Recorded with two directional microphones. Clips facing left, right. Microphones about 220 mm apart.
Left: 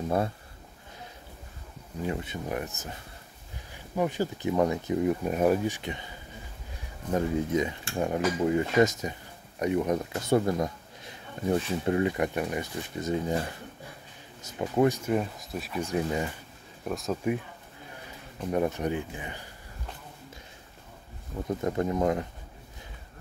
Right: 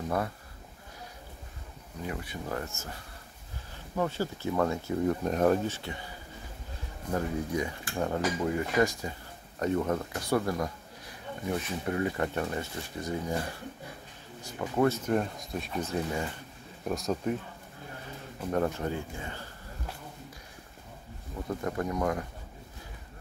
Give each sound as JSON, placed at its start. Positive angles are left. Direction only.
{"t": 2.0, "sound": "cutlery", "side_deg": 25}
{"t": 3.7, "sound": "speech", "side_deg": 15}
{"t": 7.1, "sound": "cutlery", "side_deg": 20}
{"t": 9.6, "sound": "a man's voice", "side_deg": 15}
{"t": 14.4, "sound": "cutlery", "side_deg": 20}
{"t": 15.0, "sound": "speech", "side_deg": 5}
{"t": 16.8, "sound": "speech", "side_deg": 0}
{"t": 18.5, "sound": "speech", "side_deg": 15}
{"t": 21.5, "sound": "cutlery", "side_deg": 20}